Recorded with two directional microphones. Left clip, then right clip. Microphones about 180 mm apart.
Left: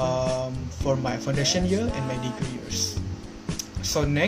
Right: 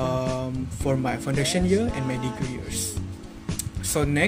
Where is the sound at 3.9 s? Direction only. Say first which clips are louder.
Right 1 dB; 50° right (ahead or behind).